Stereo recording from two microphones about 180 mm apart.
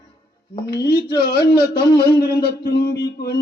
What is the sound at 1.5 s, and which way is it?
Speech, 25° left (ahead or behind).